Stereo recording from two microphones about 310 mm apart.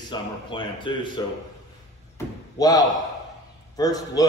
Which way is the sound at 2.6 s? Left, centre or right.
Centre.